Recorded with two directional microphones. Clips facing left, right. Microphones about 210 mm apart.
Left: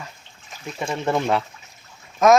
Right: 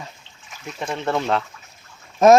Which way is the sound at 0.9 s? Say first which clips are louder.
Left 1 dB; 10° left (ahead or behind).